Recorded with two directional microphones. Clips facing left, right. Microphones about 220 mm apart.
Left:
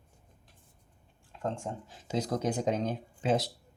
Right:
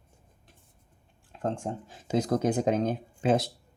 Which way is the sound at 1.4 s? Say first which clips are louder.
Right 4 dB; 50° right (ahead or behind).